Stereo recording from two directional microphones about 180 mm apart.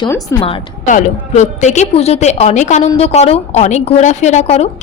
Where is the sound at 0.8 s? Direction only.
45° left (ahead or behind).